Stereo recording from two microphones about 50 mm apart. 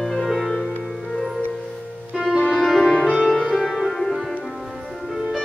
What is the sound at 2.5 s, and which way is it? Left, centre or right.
Music, centre.